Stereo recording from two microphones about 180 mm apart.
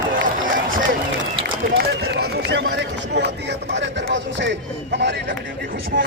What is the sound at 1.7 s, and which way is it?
Speech, 60° right (ahead or behind).